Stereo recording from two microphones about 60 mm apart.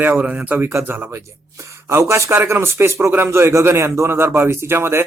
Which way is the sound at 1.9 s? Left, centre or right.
Right.